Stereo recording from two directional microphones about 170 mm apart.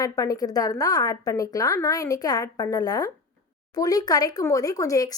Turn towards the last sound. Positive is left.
turn(degrees=20)  # may be behind; listen again after turning